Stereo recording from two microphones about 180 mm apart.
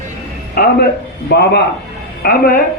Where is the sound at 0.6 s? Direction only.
55° left (ahead or behind).